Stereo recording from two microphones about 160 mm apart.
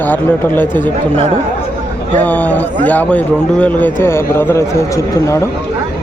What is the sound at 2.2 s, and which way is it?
A man's voice, 10° left (ahead or behind).